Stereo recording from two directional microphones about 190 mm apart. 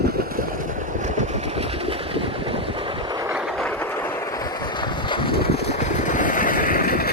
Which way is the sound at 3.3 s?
5° right (ahead or behind).